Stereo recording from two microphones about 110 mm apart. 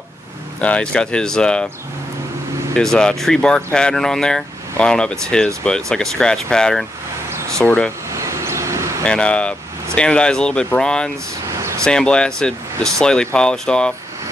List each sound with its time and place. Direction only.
0.6 s speech: 10° left (ahead or behind)
2.7 s speech: 5° left (ahead or behind)
7.2 s a sound: 25° right (ahead or behind)
7.5 s speech: 10° left (ahead or behind)
8.1 s vehicle: 25° right (ahead or behind)
9.0 s speech: 10° left (ahead or behind)